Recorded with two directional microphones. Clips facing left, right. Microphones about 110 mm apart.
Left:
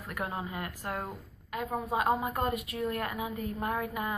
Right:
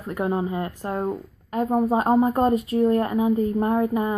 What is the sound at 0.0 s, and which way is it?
Speech, 25° right (ahead or behind).